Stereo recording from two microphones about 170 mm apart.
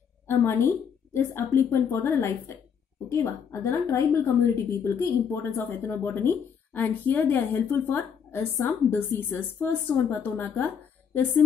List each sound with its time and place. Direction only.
0.3 s speech: 15° left (ahead or behind)